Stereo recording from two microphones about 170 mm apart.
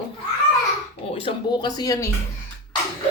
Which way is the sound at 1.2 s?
25° left (ahead or behind).